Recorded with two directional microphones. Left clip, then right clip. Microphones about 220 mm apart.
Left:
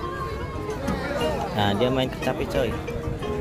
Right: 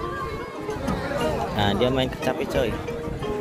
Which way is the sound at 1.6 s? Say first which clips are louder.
Even; 5° left (ahead or behind).